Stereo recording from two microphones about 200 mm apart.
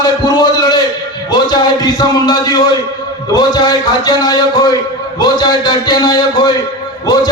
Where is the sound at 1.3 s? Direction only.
20° left (ahead or behind).